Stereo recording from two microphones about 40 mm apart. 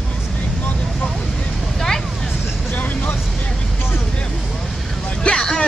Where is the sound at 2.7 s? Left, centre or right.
Left.